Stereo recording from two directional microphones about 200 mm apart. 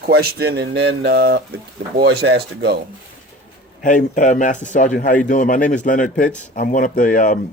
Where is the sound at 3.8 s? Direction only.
40° left (ahead or behind).